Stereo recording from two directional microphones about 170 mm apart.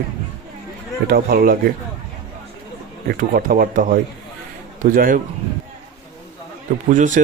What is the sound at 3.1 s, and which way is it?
A man's voice, 60° right (ahead or behind).